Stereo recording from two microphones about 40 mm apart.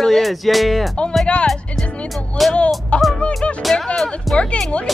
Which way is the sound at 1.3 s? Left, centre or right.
Left.